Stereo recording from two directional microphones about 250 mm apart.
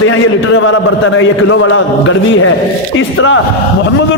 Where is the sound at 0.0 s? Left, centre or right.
Left.